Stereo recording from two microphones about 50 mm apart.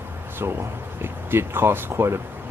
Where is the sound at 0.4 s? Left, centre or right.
Right.